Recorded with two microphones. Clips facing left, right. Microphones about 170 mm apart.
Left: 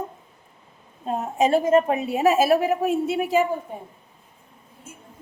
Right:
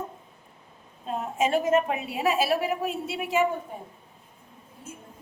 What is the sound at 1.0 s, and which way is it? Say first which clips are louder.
A woman's voice: left 5 dB; 40° left (ahead or behind).